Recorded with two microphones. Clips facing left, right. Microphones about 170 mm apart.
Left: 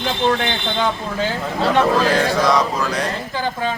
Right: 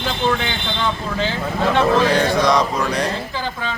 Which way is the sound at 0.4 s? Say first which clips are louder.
Left 2 dB; 45° left (ahead or behind).